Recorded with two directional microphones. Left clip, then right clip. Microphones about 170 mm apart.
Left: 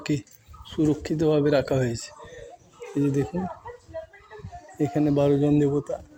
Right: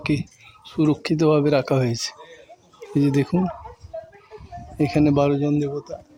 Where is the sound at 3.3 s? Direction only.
40° right (ahead or behind).